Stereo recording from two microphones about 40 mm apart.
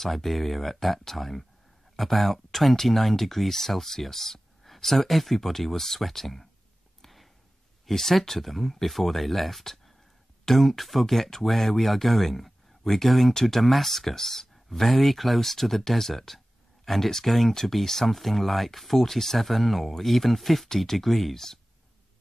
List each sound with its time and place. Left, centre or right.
0.0 s speech: centre
7.0 s a sound: centre
7.8 s speech: centre